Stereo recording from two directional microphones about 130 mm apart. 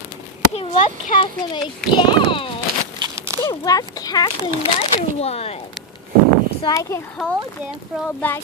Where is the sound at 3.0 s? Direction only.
20° right (ahead or behind).